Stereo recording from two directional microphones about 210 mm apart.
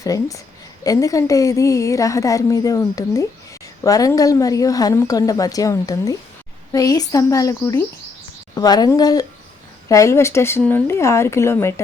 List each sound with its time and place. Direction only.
0.0 s a woman's voice: 15° left (ahead or behind)